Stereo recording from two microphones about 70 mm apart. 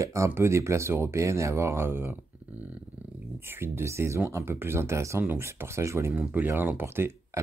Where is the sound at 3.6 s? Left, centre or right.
Right.